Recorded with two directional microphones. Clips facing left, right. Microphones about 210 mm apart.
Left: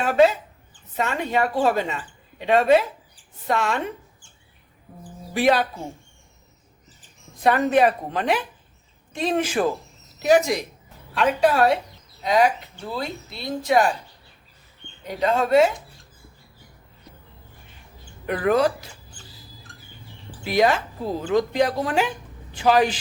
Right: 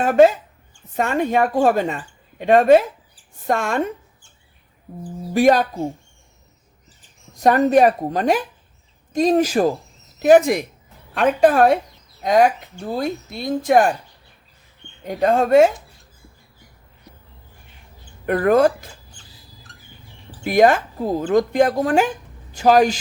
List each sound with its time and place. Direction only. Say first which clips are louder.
0.0 s a woman's voice: right 4 dB; 50° right (ahead or behind)
5.3 s a woman's voice: right 5 dB; 45° right (ahead or behind)
7.3 s a woman's voice: right 4 dB; 40° right (ahead or behind)
10.2 s a woman's voice: right 6 dB; 50° right (ahead or behind)
15.0 s a woman's voice: right 4 dB; 50° right (ahead or behind)
18.3 s a woman's voice: right 5 dB; 50° right (ahead or behind)
20.4 s a woman's voice: right 5 dB; 50° right (ahead or behind)